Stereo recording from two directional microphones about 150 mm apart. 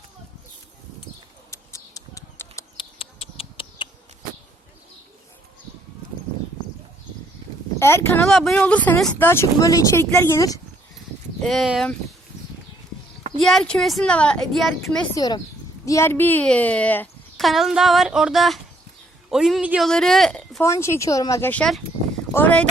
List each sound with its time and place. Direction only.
1.5 s bird: 20° left (ahead or behind)
2.7 s bird: 40° left (ahead or behind)
7.8 s speech: 15° left (ahead or behind)
8.3 s speech: centre (ahead or behind); by 10.6 s 20° left (ahead or behind)
11.4 s a woman's voice: centre (ahead or behind)
13.4 s a woman's voice: 5° left (ahead or behind)
15.1 s a woman's voice: 25° left (ahead or behind); by 17.4 s 10° left (ahead or behind)
17.4 s a woman's voice: centre (ahead or behind)
20.6 s speech: 20° left (ahead or behind)